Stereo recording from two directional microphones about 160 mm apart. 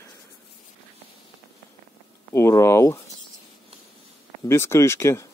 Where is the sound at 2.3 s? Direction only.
15° left (ahead or behind).